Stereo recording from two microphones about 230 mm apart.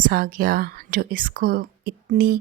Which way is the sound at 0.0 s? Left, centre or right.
Right.